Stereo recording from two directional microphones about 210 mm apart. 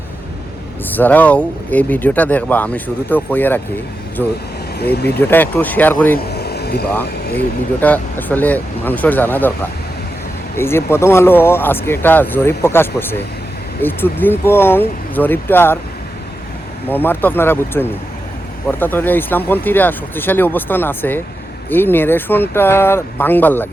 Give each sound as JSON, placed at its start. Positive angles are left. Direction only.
{"t": 0.9, "sound": "speech", "side_deg": 10}
{"t": 5.1, "sound": "speech", "side_deg": 10}
{"t": 6.1, "sound": "a sound", "side_deg": 50}
{"t": 6.9, "sound": "speech", "side_deg": 10}
{"t": 10.6, "sound": "speech", "side_deg": 10}
{"t": 16.9, "sound": "speech", "side_deg": 10}